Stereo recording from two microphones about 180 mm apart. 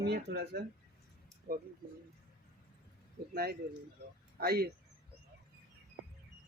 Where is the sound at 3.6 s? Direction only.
65° right (ahead or behind).